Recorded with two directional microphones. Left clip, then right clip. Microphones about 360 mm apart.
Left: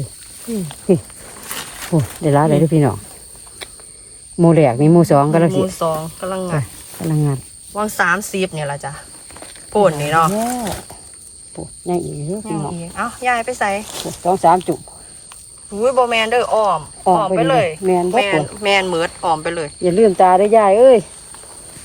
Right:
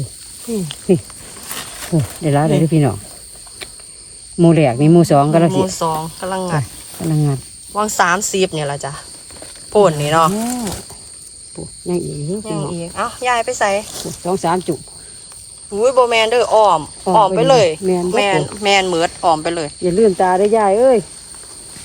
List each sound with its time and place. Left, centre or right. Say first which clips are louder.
0.5 s speech: right 1 dB; centre
1.5 s wild animals: even; centre
2.2 s speech: left 2 dB; centre
4.4 s speech: even; centre
10.6 s speech: left 1 dB; centre
12.5 s speech: right 2 dB; centre
14.0 s speech: left 5 dB; centre
15.8 s speech: right 2 dB; centre
19.8 s speech: left 2 dB; left